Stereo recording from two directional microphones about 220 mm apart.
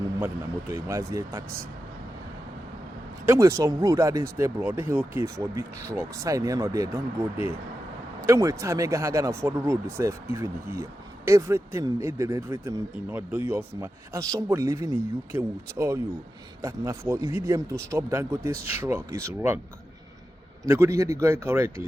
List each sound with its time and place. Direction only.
0.7 s speech: 15° right (ahead or behind)
3.2 s speech: 15° right (ahead or behind)
8.3 s speech: 15° right (ahead or behind)
20.7 s speech: 10° right (ahead or behind)